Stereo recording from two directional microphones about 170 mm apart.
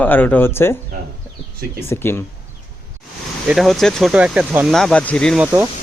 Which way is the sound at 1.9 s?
15° left (ahead or behind).